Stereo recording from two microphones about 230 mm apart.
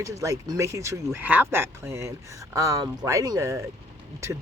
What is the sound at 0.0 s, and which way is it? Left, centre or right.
Speech, centre.